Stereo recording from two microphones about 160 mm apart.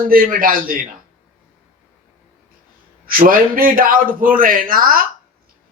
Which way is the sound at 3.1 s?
60° right (ahead or behind).